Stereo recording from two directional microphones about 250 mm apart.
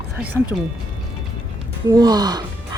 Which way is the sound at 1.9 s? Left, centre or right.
Centre.